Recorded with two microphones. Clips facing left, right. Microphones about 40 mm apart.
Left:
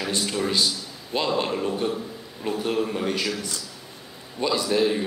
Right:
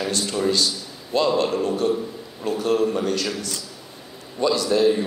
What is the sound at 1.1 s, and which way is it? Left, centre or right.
A man's voice, centre.